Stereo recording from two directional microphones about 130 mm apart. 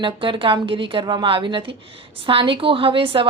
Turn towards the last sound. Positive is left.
turn(degrees=-45)  # may be behind; listen again after turning